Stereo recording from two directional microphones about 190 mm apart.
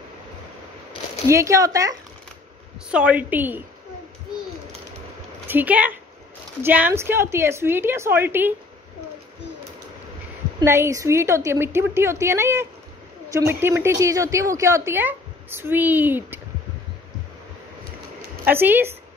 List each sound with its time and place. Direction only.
1.2 s a woman's voice: 15° right (ahead or behind)
2.9 s a woman's voice: 5° right (ahead or behind)
5.5 s a woman's voice: 10° right (ahead or behind)
10.6 s a woman's voice: 15° right (ahead or behind)
18.4 s a woman's voice: 10° right (ahead or behind)